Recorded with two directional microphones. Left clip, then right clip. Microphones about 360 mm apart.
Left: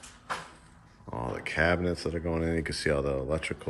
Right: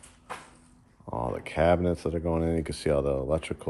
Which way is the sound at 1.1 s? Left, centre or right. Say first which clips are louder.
Right 1 dB; centre.